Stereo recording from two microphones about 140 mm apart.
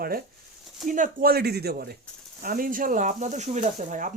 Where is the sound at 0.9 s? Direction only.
65° right (ahead or behind).